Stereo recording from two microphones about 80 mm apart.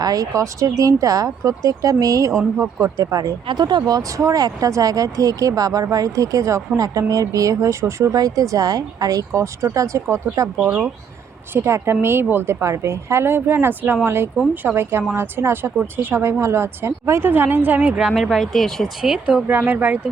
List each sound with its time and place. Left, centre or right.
0.0 s speech: right
3.4 s speech: right
8.1 s speech: right
10.7 s speech: centre
11.5 s a woman's voice: right; by 18.1 s centre
18.1 s speech: centre
19.0 s speech: centre
19.5 s a woman's voice: right